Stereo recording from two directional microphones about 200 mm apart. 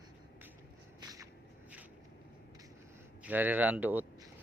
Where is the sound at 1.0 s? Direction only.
20° right (ahead or behind).